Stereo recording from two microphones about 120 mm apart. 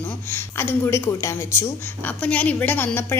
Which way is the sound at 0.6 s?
20° left (ahead or behind).